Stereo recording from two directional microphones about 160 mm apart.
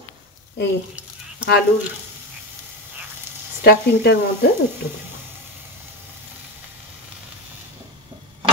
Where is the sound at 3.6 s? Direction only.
85° left.